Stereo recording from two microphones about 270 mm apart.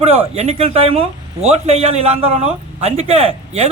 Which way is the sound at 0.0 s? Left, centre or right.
Right.